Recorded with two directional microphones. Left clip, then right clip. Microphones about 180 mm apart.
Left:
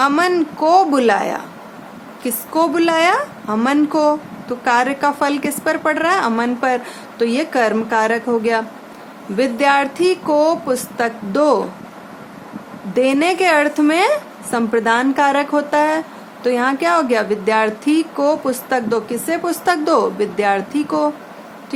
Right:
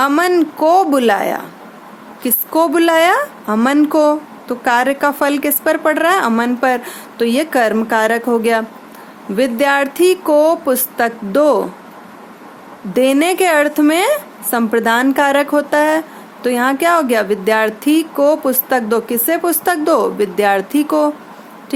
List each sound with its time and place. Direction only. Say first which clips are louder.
0.0 s speech: right 2 dB; 30° right (ahead or behind)
12.9 s speech: right 2 dB; 35° right (ahead or behind)